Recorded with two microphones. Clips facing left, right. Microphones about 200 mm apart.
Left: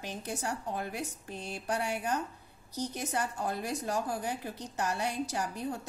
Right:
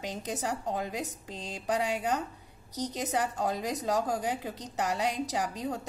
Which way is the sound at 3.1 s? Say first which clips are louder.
Right 4 dB; 90° right.